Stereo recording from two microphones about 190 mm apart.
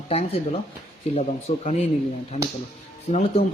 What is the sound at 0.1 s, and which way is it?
Speech, 30° left (ahead or behind).